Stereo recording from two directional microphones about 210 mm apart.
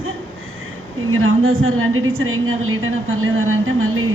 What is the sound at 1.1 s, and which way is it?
A woman's voice, 75° right (ahead or behind).